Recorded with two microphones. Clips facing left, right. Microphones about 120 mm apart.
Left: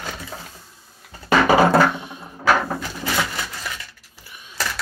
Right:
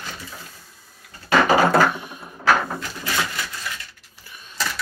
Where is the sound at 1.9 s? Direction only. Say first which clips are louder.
Left 1 dB; 20° left (ahead or behind).